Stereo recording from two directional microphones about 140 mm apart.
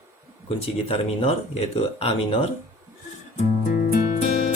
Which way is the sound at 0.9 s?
45° left (ahead or behind).